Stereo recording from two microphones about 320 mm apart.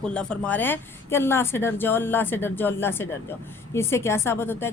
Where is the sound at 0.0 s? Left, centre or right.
Centre.